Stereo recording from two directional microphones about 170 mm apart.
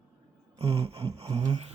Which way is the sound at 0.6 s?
35° right (ahead or behind).